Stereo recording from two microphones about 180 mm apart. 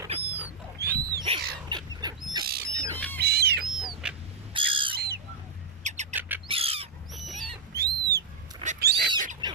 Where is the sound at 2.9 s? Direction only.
10° left (ahead or behind).